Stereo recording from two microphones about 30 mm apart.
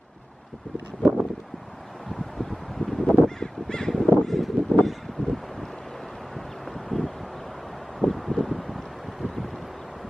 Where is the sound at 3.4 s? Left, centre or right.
Left.